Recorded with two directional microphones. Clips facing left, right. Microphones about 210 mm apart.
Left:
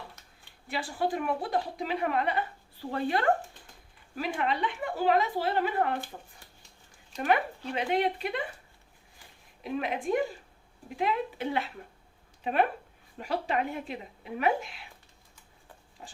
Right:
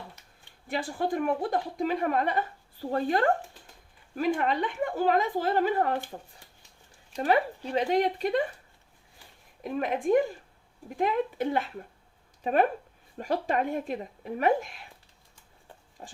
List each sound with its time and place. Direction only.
0.7 s speech: 50° right (ahead or behind)
7.2 s speech: 35° right (ahead or behind)
9.6 s speech: 45° right (ahead or behind)
16.0 s speech: 40° right (ahead or behind)